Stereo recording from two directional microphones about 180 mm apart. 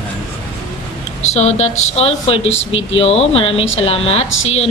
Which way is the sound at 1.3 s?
35° left (ahead or behind).